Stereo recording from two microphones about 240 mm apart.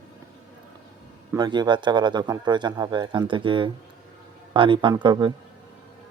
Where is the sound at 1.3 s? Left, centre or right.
Centre.